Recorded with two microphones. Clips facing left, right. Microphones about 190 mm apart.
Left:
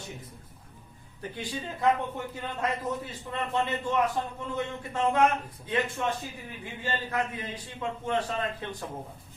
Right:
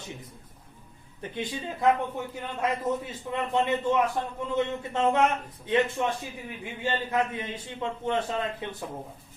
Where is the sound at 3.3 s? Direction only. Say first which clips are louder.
Right 3 dB; 15° right (ahead or behind).